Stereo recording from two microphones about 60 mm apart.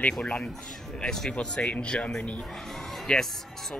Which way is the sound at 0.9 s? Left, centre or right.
Centre.